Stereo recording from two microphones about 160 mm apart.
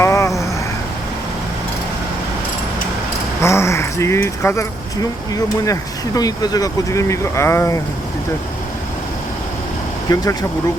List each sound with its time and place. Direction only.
0.0 s vehicle: 20° left (ahead or behind)
3.4 s speech: 15° left (ahead or behind)
6.1 s speech: 25° left (ahead or behind)
10.1 s speech: 25° left (ahead or behind)